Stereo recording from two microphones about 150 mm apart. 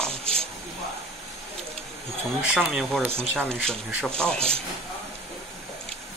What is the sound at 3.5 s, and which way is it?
Speech, 5° left (ahead or behind).